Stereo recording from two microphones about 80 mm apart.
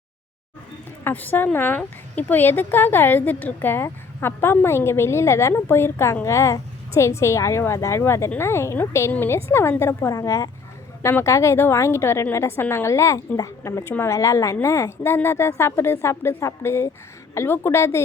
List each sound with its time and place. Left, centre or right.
1.0 s a woman's voice: left